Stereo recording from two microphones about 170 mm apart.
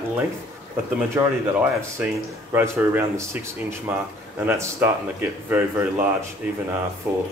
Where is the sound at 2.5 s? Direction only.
15° right (ahead or behind).